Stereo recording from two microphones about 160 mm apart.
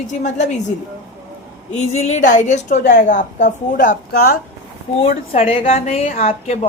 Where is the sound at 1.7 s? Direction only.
45° left (ahead or behind); by 4.4 s 65° left (ahead or behind).